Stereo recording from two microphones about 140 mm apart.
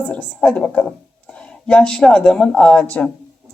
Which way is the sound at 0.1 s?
10° left (ahead or behind).